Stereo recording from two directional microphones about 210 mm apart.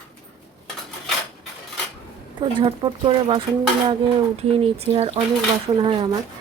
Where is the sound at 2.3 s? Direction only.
25° right (ahead or behind).